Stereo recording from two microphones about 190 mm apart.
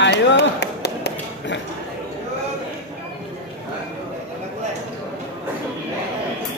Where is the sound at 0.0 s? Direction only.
65° left (ahead or behind).